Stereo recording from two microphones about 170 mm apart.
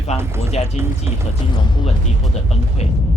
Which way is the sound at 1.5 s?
25° left (ahead or behind).